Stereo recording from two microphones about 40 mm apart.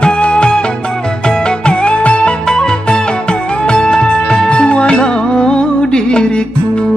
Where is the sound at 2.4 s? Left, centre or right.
Centre.